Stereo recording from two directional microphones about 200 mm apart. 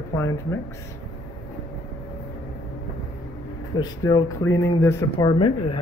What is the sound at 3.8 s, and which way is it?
Speech, 20° left (ahead or behind).